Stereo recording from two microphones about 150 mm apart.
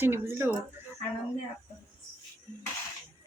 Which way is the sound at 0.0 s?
15° right (ahead or behind).